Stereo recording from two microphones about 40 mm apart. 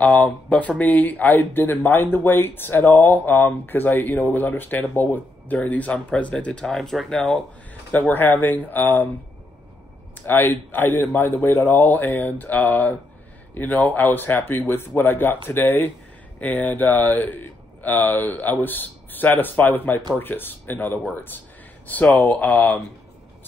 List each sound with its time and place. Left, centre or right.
0.0 s speech: left
1.4 s speech: left
6.6 s speech: centre
8.1 s speech: left
10.2 s speech: left
11.4 s speech: left
11.7 s speech: left
16.3 s speech: left